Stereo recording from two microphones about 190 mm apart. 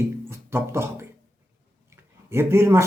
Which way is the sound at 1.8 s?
15° right (ahead or behind).